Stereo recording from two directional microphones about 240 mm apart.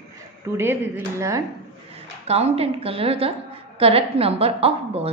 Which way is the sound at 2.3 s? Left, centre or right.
Right.